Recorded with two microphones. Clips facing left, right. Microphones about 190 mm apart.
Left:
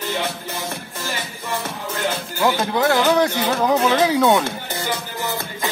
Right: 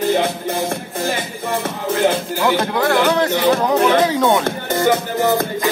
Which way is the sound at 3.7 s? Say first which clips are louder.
Right 1 dB; 60° right (ahead or behind).